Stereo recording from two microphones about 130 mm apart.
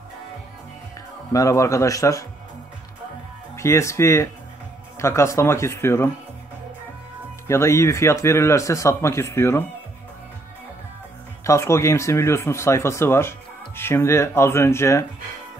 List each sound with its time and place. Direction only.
1.3 s a man's voice: 25° left (ahead or behind)
3.5 s a man's voice: 20° left (ahead or behind)
7.4 s a man's voice: 20° left (ahead or behind)
11.4 s a man's voice: 20° left (ahead or behind)